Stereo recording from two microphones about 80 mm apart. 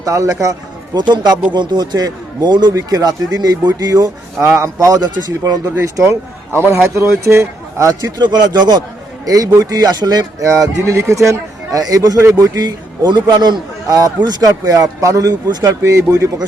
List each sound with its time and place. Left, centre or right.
0.0 s a man's voice: right
0.9 s speech: right
2.7 s a man's voice: right
4.4 s a man's voice: right
5.7 s a man's voice: right
8.2 s a man's voice: right
10.4 s a man's voice: right
12.5 s a man's voice: right